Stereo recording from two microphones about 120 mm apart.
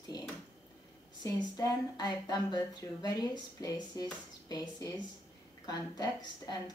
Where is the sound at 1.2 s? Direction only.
35° left (ahead or behind).